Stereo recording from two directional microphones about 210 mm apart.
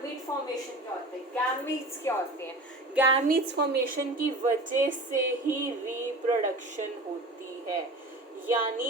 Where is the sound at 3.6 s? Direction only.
50° right (ahead or behind).